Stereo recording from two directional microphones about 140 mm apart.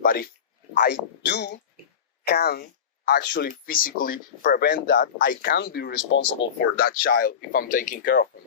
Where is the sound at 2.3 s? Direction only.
90° left; by 8.2 s 70° left (ahead or behind).